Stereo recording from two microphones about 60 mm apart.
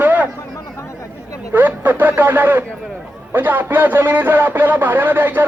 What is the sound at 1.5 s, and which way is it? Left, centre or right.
Speech, right.